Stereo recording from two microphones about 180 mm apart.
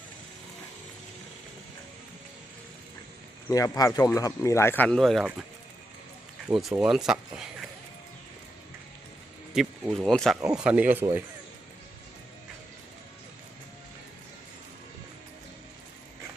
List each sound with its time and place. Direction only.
3.5 s speech: 20° left (ahead or behind); by 5.5 s centre (ahead or behind)
6.5 s speech: centre (ahead or behind)
9.5 s speech: 5° right (ahead or behind)